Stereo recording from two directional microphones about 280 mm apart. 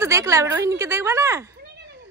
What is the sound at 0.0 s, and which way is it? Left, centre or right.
A woman's voice, centre.